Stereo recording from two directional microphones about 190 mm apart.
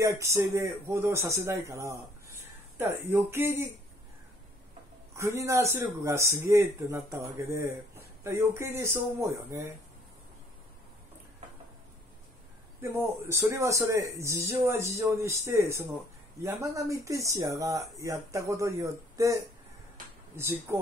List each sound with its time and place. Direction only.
0.0 s speech: 15° right (ahead or behind)
5.1 s speech: 15° right (ahead or behind)
12.8 s speech: 15° right (ahead or behind)
20.7 s speech: 10° right (ahead or behind)